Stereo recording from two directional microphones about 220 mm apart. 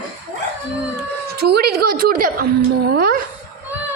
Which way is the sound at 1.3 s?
45° right (ahead or behind).